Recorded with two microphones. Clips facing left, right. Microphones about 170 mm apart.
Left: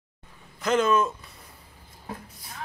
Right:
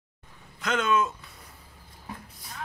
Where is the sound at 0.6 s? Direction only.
Centre (ahead or behind).